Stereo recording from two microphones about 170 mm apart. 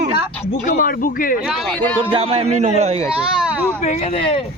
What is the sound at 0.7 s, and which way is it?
Speech, 55° left (ahead or behind).